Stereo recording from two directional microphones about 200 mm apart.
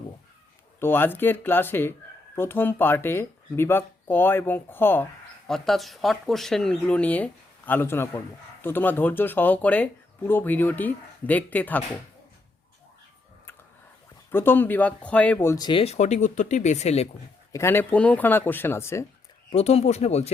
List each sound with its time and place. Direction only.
0.8 s speech: 10° left (ahead or behind)
14.3 s speech: 10° left (ahead or behind); by 17.1 s 35° left (ahead or behind)
17.5 s speech: 10° left (ahead or behind)
19.5 s speech: 30° left (ahead or behind)